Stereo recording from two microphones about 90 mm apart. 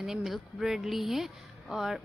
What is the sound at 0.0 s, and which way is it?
Speech, 5° right (ahead or behind).